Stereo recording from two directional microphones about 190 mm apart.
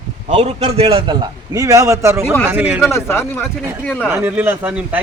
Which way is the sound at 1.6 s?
15° right (ahead or behind).